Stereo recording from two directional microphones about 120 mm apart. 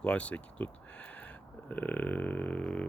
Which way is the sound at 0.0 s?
10° left (ahead or behind).